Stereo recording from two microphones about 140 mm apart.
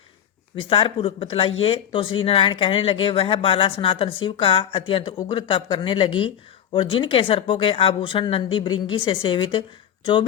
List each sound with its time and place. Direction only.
0.6 s speech: 40° left (ahead or behind)